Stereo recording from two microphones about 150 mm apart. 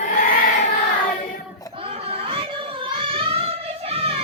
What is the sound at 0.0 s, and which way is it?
Choir, 60° left (ahead or behind).